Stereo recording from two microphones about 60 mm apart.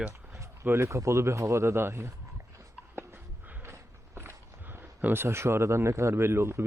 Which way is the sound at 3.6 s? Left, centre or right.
Right.